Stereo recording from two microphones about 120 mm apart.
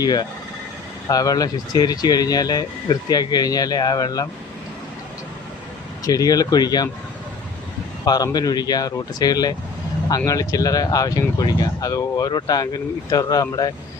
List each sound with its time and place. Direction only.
0.0 s speech: 35° left (ahead or behind)
6.1 s speech: 30° left (ahead or behind)
8.0 s speech: 30° left (ahead or behind)